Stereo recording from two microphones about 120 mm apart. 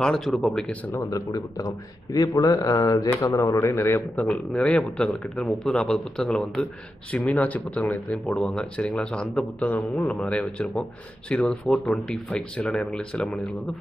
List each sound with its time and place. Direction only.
0.0 s a man's voice: 5° left (ahead or behind)
0.9 s speech: 30° left (ahead or behind)
4.2 s a man's voice: 5° left (ahead or behind)